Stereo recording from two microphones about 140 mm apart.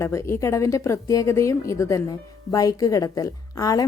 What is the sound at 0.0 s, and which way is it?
Speech, 20° left (ahead or behind).